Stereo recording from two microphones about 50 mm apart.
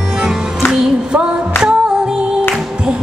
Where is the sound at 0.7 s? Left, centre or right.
Centre.